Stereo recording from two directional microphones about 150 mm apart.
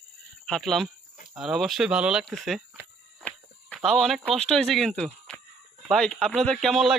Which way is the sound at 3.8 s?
Centre (ahead or behind).